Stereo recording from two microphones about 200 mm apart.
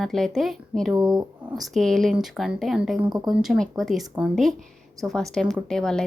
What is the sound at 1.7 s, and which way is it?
A woman's voice, centre (ahead or behind).